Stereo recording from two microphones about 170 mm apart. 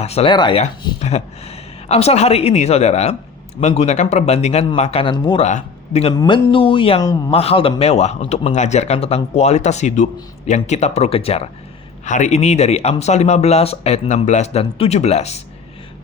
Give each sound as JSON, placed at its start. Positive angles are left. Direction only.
{"t": 0.0, "sound": "speech", "side_deg": 35}
{"t": 0.9, "sound": "speech", "side_deg": 40}
{"t": 5.5, "sound": "a man's voice", "side_deg": 45}
{"t": 6.1, "sound": "speech", "side_deg": 30}